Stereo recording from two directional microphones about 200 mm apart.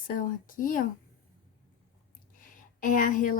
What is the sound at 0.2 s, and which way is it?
Speech, 45° left (ahead or behind).